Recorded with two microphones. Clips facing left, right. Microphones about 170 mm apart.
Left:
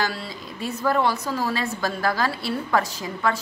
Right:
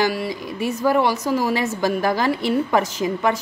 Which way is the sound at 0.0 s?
15° right (ahead or behind).